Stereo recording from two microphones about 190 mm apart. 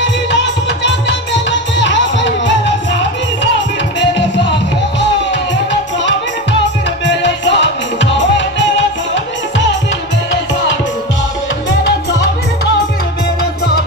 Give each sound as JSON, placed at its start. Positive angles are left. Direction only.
{"t": 0.8, "sound": "music", "side_deg": 70}
{"t": 7.1, "sound": "music", "side_deg": 70}